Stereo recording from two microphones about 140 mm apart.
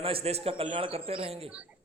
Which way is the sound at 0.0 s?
40° right (ahead or behind).